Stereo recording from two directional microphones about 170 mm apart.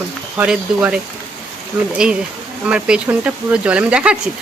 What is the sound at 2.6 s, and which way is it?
Speech, 5° right (ahead or behind).